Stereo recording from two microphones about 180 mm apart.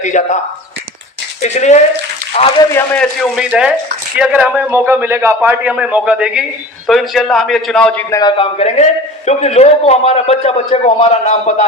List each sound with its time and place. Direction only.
0.0 s speech: 45° left (ahead or behind)
1.4 s a man's voice: 40° left (ahead or behind)
2.7 s a man's voice: 5° left (ahead or behind)
8.1 s a man's voice: 25° left (ahead or behind)